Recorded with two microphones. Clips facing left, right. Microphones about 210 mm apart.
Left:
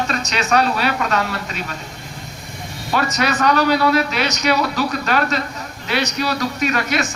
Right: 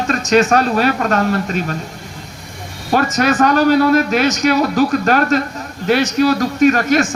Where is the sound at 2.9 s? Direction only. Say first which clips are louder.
Right 5 dB; 50° right (ahead or behind).